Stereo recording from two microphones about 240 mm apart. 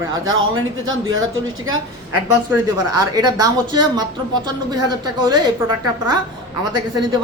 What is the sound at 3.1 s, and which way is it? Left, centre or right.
Speech, centre.